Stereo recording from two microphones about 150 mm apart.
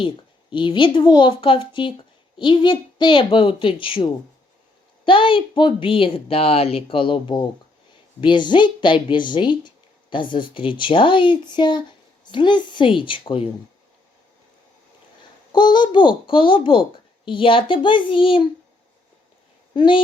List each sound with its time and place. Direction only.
0.5 s speech: 35° left (ahead or behind)
15.5 s speech: 30° left (ahead or behind)
19.7 s speech: 30° left (ahead or behind)